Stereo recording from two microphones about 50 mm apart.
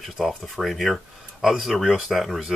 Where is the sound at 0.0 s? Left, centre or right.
Centre.